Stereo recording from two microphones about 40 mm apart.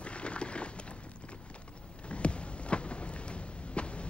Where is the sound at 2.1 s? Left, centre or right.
Left.